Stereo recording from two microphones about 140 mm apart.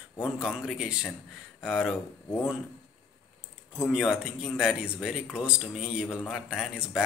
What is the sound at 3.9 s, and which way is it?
Speech, 5° right (ahead or behind).